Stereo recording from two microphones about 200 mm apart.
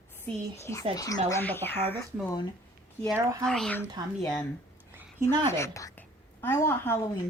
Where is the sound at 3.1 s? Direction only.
15° right (ahead or behind).